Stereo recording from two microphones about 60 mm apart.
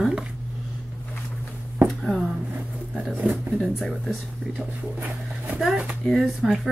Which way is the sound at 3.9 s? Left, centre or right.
Centre.